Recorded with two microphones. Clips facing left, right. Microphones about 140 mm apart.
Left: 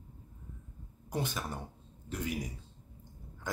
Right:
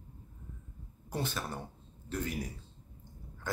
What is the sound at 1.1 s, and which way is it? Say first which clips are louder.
Speech: even; 15° left (ahead or behind).